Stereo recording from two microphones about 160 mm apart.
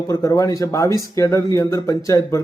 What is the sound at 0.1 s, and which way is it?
A man's voice, 20° left (ahead or behind).